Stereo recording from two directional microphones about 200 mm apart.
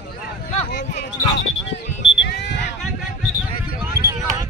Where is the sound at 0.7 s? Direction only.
60° left (ahead or behind).